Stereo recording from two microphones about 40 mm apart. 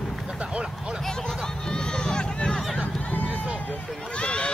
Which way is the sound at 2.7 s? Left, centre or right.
Left.